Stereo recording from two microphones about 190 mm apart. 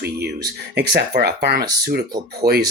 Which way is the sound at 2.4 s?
20° right (ahead or behind).